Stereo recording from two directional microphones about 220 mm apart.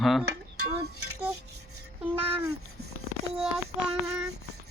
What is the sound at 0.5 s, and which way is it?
Music, 90° right.